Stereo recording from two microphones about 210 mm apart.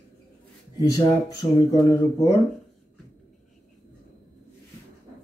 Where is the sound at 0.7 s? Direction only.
20° left (ahead or behind).